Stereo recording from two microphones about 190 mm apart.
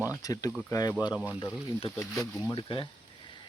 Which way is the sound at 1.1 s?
5° right (ahead or behind).